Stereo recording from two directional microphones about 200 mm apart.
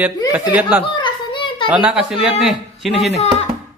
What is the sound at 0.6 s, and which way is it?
Speech, 10° right (ahead or behind).